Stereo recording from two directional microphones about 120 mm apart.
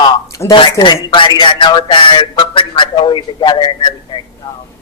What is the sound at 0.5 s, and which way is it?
A man's voice, 40° left (ahead or behind).